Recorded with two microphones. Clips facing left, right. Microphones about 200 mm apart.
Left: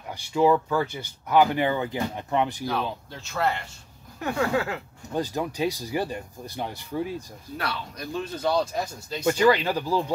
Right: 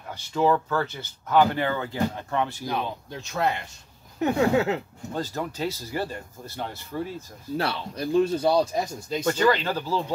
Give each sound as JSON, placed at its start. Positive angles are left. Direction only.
{"t": 0.1, "sound": "speech", "side_deg": 10}
{"t": 2.6, "sound": "speech", "side_deg": -20}
{"t": 5.1, "sound": "speech", "side_deg": 15}
{"t": 7.5, "sound": "speech", "side_deg": -30}
{"t": 8.5, "sound": "speech", "side_deg": -10}
{"t": 9.2, "sound": "speech", "side_deg": 10}